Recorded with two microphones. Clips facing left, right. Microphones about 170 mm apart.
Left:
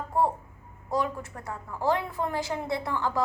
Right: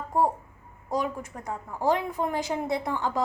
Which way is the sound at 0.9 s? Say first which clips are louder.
Even; 15° right (ahead or behind).